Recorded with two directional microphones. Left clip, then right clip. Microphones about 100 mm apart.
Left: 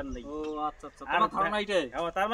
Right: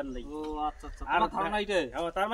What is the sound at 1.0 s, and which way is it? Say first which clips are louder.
Speech: left 1 dB; 35° left (ahead or behind).